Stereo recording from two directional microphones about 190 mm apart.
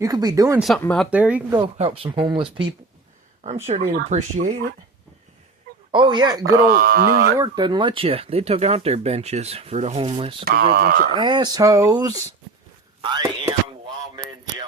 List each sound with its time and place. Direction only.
0.0 s speech: 20° right (ahead or behind)
0.6 s speech: centre (ahead or behind)
1.8 s speech: 30° right (ahead or behind)
3.7 s speech: 35° right (ahead or behind)
5.9 s speech: 25° right (ahead or behind)
6.7 s speech: 50° right (ahead or behind)
7.3 s speech: 20° right (ahead or behind)
10.4 s speech: 50° right (ahead or behind)
11.2 s speech: 20° right (ahead or behind)
13.0 s a sound: 25° right (ahead or behind)